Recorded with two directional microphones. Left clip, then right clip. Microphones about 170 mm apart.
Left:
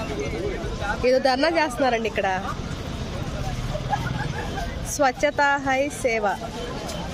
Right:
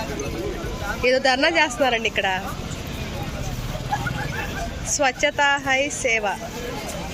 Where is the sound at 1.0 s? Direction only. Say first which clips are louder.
Right 1 dB; 5° left (ahead or behind).